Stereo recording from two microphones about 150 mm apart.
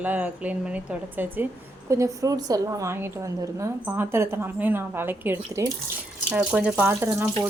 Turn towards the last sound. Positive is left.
turn(degrees=-15)  # may be behind; listen again after turning